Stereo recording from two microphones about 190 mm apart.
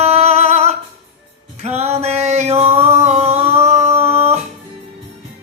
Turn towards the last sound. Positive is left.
turn(degrees=-35)  # may be behind; listen again after turning